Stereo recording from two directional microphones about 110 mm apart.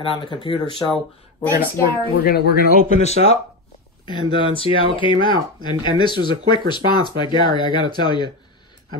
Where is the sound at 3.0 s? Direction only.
70° left (ahead or behind).